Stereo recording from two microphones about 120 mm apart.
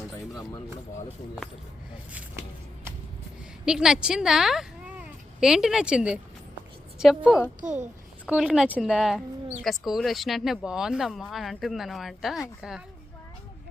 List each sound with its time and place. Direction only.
3.7 s speech: 5° right (ahead or behind)
7.6 s a child's voice: 90° right
8.3 s speech: 5° right (ahead or behind)